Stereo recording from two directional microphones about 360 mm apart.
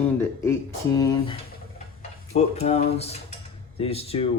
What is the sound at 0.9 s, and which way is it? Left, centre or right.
Speech, centre.